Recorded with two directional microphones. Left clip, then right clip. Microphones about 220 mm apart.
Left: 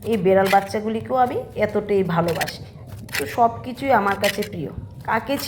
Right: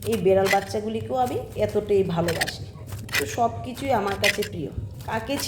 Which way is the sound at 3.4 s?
5° left (ahead or behind).